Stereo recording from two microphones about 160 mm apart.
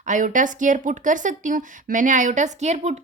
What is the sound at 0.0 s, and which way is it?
Speech, 50° right (ahead or behind).